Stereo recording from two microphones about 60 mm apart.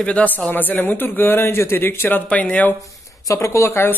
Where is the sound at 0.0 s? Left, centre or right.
Left.